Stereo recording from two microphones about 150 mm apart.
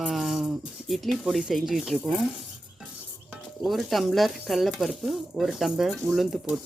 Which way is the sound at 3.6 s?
Centre (ahead or behind).